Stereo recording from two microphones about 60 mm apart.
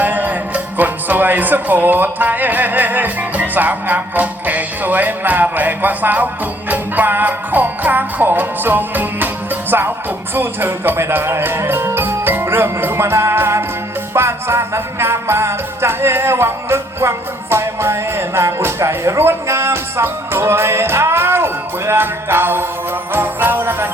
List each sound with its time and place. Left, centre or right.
0.0 s music: right